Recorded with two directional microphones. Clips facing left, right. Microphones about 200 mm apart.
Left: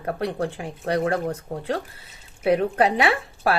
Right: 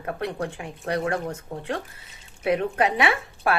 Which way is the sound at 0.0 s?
30° left (ahead or behind).